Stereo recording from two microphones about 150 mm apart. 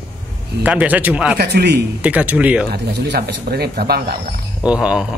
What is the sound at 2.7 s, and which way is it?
Speech, 90° right.